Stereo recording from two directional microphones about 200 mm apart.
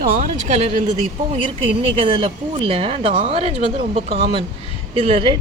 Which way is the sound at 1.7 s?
25° right (ahead or behind).